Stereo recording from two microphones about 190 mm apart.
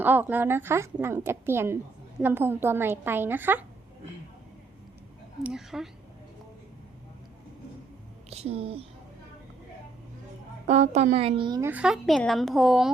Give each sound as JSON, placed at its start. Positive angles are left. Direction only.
{"t": 0.0, "sound": "a woman's voice", "side_deg": -10}
{"t": 5.4, "sound": "speech", "side_deg": -5}
{"t": 8.3, "sound": "speech", "side_deg": -30}
{"t": 10.7, "sound": "a woman's voice", "side_deg": -35}
{"t": 11.7, "sound": "speech", "side_deg": -5}